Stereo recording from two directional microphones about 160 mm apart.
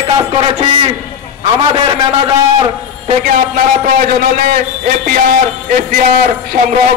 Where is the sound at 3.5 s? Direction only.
60° right (ahead or behind).